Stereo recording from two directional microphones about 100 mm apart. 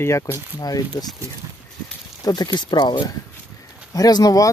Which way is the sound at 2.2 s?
45° left (ahead or behind).